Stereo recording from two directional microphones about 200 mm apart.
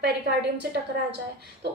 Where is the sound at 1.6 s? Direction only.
55° right (ahead or behind).